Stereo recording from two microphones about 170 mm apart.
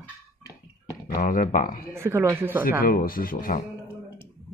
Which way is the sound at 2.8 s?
60° left (ahead or behind).